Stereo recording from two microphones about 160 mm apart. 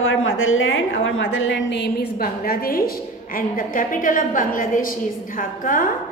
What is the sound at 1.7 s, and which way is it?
A woman's voice, 85° left.